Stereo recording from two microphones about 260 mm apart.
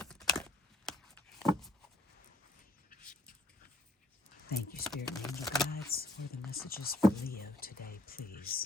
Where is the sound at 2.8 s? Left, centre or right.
Left.